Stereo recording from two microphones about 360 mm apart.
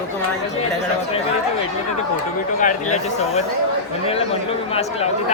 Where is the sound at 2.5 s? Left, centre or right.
Centre.